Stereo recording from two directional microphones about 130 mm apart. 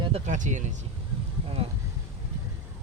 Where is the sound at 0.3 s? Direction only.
75° right (ahead or behind).